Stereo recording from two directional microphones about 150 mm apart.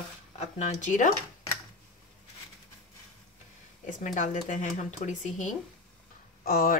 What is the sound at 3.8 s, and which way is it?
Speech, 55° left (ahead or behind).